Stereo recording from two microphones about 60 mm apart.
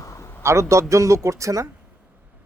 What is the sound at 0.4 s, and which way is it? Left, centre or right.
Speech, right.